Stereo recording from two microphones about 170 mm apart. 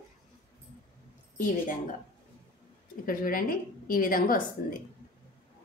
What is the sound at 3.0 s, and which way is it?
A woman's voice, 55° left (ahead or behind).